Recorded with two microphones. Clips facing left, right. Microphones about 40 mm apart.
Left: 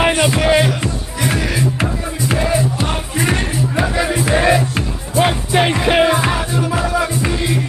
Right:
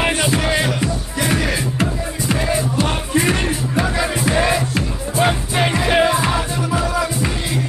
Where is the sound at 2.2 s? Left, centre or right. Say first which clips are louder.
Left 3 dB; centre.